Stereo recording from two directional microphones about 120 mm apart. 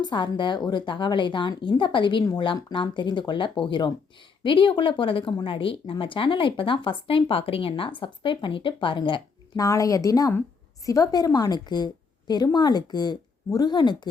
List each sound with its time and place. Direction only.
0.0 s speech: 40° left (ahead or behind)
9.6 s speech: 30° left (ahead or behind)